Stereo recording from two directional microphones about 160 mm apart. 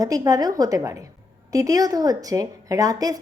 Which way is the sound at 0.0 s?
20° right (ahead or behind).